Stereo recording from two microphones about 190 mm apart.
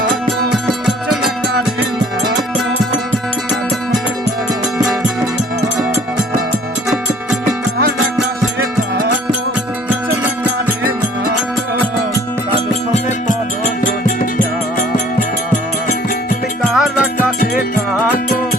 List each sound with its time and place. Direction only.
0.9 s music: centre (ahead or behind)
13.8 s music: 45° left (ahead or behind)
16.7 s music: centre (ahead or behind)
17.4 s music: 50° left (ahead or behind)